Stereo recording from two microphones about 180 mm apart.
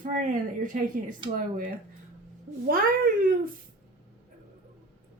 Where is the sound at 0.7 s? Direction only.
45° right (ahead or behind).